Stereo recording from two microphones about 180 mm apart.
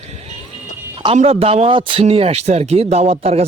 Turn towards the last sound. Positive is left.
turn(degrees=-35)  # may be behind; listen again after turning